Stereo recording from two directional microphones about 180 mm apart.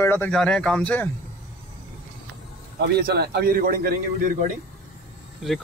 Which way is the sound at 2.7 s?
65° right (ahead or behind).